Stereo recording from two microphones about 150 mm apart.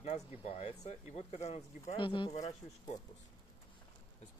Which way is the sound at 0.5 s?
45° left (ahead or behind).